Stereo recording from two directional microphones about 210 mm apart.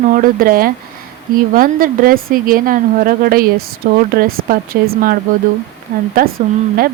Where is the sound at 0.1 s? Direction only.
40° right (ahead or behind).